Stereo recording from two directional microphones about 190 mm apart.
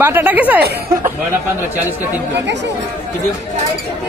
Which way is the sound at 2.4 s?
65° right (ahead or behind).